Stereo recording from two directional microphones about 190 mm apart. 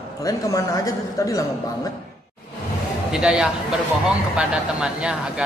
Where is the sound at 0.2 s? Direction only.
15° left (ahead or behind).